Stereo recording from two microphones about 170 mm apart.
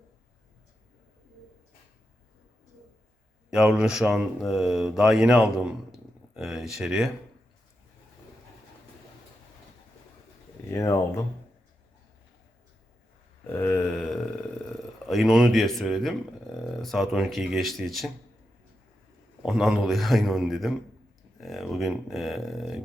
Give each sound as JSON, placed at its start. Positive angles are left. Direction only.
{"t": 3.5, "sound": "speech", "side_deg": -5}
{"t": 10.7, "sound": "speech", "side_deg": 15}
{"t": 13.5, "sound": "speech", "side_deg": 10}
{"t": 19.4, "sound": "speech", "side_deg": 0}